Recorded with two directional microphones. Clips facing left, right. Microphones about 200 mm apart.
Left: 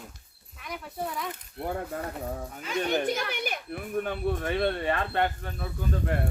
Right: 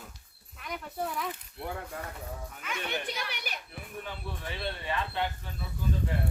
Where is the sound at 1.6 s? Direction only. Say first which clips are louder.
Left 6 dB; 50° left (ahead or behind).